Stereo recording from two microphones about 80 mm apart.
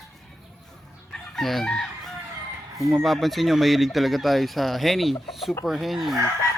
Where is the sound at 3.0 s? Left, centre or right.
Centre.